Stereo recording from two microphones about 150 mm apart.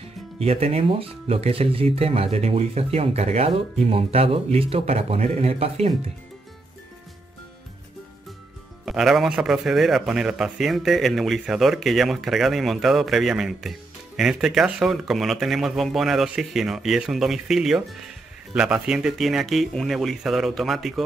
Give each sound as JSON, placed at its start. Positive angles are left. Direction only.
{"t": 0.4, "sound": "speech", "side_deg": -40}
{"t": 8.8, "sound": "a man's voice", "side_deg": 0}